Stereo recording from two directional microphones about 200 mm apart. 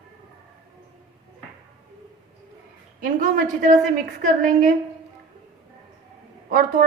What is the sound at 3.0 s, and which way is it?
A woman's voice, 45° right (ahead or behind).